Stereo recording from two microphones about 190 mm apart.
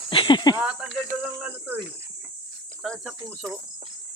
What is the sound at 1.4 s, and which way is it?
Speech, 5° right (ahead or behind).